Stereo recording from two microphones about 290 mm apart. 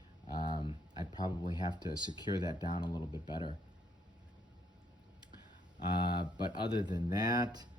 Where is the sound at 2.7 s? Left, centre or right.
Centre.